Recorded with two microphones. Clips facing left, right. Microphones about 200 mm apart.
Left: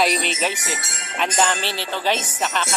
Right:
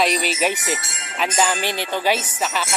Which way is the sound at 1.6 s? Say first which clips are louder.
Right 2 dB; 10° right (ahead or behind).